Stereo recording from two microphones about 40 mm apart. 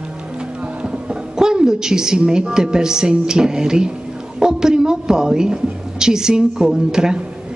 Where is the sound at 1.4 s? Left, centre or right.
Centre.